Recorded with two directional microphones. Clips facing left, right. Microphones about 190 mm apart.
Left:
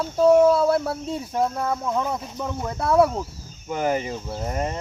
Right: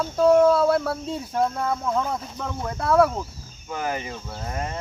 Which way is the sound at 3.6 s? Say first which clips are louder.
Left 5 dB; 25° left (ahead or behind).